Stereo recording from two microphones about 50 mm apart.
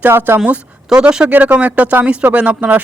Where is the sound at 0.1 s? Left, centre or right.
Right.